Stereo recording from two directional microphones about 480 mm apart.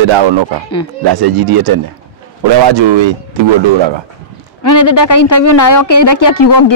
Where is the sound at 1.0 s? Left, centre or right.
Right.